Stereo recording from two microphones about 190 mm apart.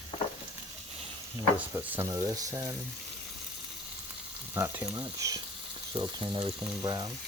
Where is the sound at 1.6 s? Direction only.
10° right (ahead or behind).